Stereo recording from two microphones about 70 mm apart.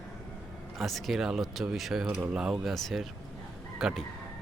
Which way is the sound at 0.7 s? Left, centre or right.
Centre.